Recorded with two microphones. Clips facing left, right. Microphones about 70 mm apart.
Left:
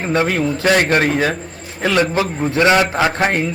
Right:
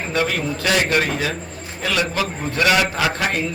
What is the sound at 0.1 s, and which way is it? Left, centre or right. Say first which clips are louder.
A man's voice: left 5 dB; left.